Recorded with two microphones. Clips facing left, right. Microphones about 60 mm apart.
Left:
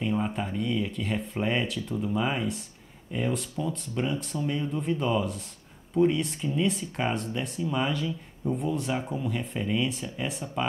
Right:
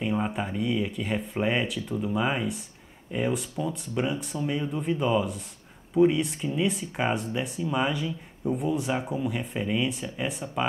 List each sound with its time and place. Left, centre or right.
0.0 s speech: centre